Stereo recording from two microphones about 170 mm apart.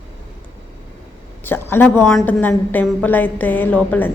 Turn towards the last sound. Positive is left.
turn(degrees=10)  # may be behind; listen again after turning